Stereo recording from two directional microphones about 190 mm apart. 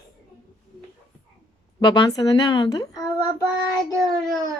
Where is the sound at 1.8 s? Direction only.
20° left (ahead or behind).